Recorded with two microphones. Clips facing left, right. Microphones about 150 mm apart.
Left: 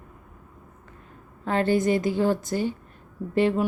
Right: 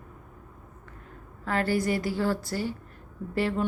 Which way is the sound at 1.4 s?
20° left (ahead or behind).